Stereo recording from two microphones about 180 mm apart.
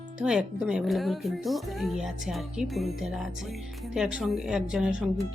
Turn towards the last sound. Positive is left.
turn(degrees=-5)  # may be behind; listen again after turning